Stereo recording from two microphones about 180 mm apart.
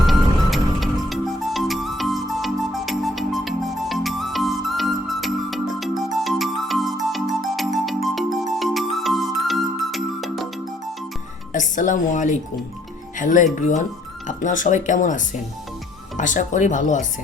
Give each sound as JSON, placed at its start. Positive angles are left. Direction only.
{"t": 0.0, "sound": "music", "side_deg": 0}
{"t": 11.5, "sound": "a woman's voice", "side_deg": 45}